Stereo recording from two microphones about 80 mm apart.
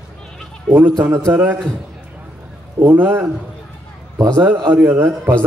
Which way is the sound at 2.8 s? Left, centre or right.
Right.